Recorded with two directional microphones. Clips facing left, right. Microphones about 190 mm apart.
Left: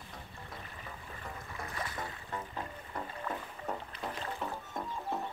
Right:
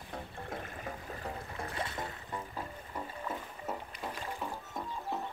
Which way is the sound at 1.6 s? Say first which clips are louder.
Right 1 dB; 25° right (ahead or behind).